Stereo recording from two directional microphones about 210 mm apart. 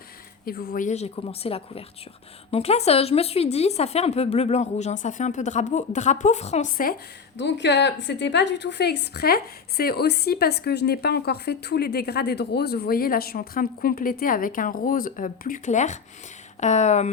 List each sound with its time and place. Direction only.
0.4 s speech: 45° left (ahead or behind)
7.3 s a woman's voice: 55° left (ahead or behind); by 17.1 s 35° left (ahead or behind)